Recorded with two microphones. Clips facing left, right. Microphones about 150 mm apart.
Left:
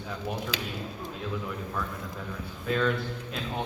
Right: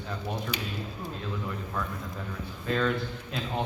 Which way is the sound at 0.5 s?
90° left.